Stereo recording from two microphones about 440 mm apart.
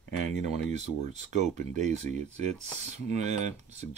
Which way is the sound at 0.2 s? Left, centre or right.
Centre.